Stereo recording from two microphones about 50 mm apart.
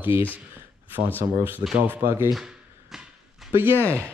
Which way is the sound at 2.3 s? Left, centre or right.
Centre.